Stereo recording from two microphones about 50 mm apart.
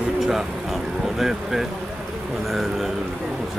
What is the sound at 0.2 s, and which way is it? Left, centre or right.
Vehicle, centre.